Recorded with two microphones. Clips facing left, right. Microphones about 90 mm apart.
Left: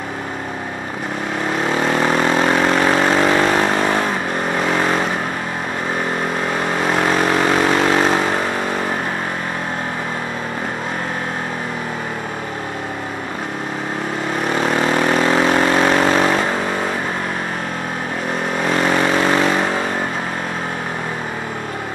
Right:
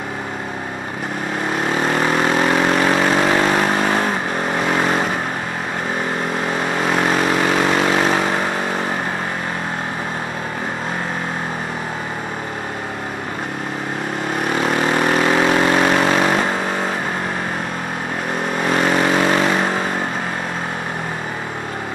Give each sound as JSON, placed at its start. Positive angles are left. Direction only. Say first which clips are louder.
{"t": 1.9, "sound": "vehicle", "louder": "left 1 dB", "side_deg": 40}
{"t": 7.0, "sound": "vehicle", "louder": "left 1 dB", "side_deg": 40}
{"t": 14.6, "sound": "vehicle", "louder": "left 1 dB", "side_deg": 40}
{"t": 18.8, "sound": "vehicle", "louder": "even", "side_deg": 40}